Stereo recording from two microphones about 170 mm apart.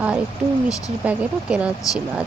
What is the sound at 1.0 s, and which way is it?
Speech, 10° right (ahead or behind).